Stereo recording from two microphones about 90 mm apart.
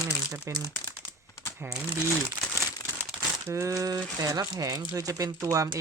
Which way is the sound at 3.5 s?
35° right (ahead or behind).